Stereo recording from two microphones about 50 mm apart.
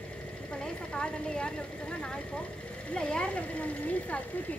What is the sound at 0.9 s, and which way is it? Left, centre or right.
Speech, centre.